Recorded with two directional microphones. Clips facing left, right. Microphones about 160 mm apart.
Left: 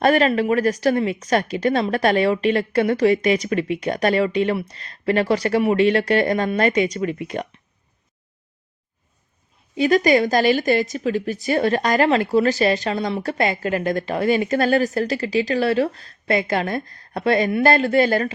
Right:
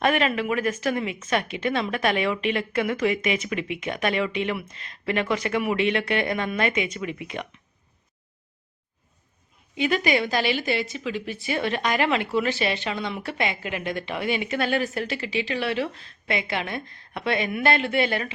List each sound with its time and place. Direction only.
0.0 s a woman's voice: 35° left (ahead or behind)
9.7 s a woman's voice: 40° left (ahead or behind)